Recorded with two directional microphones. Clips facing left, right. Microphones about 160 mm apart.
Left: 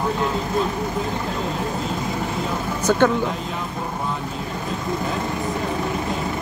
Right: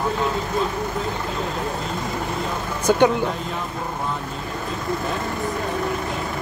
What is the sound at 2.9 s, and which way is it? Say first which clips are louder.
Speech: right 1 dB; 15° right (ahead or behind).